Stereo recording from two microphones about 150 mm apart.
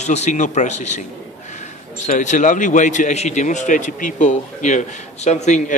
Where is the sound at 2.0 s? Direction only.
55° left (ahead or behind).